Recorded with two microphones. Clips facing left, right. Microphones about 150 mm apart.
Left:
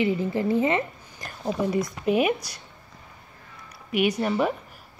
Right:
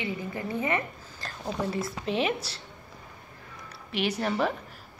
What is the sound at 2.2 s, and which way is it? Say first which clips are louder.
Speech: left 4 dB; 30° right (ahead or behind).